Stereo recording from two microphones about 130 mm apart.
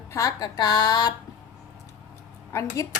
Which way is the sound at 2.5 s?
20° left (ahead or behind).